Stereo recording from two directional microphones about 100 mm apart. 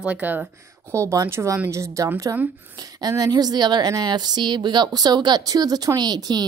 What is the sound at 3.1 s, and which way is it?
Speech, 40° right (ahead or behind).